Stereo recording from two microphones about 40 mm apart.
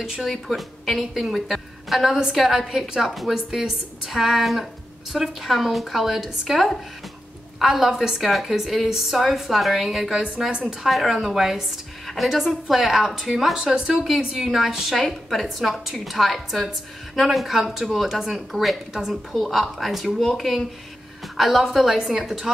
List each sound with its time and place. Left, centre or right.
0.2 s a woman's voice: centre
7.9 s a woman's voice: centre
8.2 s a woman's voice: centre
8.8 s a woman's voice: centre
15.0 s a woman's voice: centre